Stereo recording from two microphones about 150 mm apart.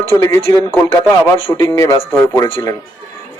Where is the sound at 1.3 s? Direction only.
35° left (ahead or behind).